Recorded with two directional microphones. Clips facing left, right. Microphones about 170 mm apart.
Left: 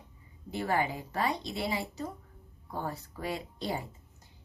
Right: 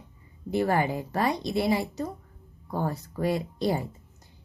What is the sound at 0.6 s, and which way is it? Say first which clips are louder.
A woman's voice: right 4 dB; 50° right (ahead or behind).